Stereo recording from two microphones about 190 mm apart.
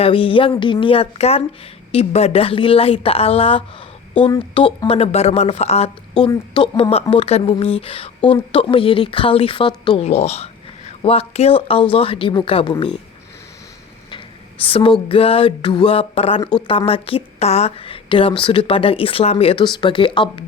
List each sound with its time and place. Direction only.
0.0 s a woman's voice: 30° left (ahead or behind)
14.6 s a woman's voice: 30° left (ahead or behind)